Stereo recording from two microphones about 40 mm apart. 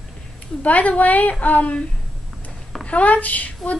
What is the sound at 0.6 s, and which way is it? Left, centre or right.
Child singing, left.